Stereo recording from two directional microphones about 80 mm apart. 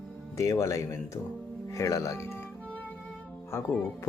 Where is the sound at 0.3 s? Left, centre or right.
Left.